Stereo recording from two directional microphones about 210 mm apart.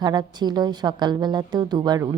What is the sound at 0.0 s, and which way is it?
A woman's voice, 20° right (ahead or behind).